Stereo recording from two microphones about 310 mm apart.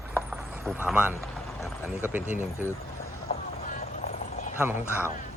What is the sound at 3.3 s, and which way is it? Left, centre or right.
Clip-clop, left.